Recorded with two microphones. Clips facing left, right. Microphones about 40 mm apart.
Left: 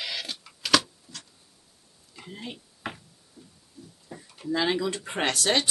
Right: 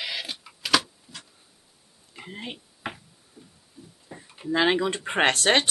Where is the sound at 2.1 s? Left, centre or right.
Right.